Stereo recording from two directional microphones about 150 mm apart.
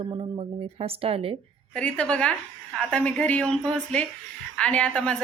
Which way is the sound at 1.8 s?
5° left (ahead or behind).